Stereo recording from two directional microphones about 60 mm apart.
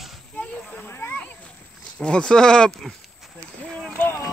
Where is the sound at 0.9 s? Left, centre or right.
Left.